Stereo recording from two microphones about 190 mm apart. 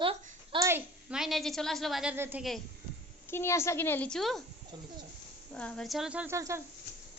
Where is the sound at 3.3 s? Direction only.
15° left (ahead or behind).